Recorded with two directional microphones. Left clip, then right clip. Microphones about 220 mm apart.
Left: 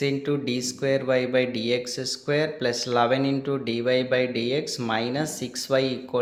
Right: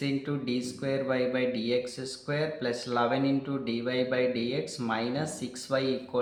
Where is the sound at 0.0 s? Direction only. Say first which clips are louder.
Left 7 dB; 40° left (ahead or behind).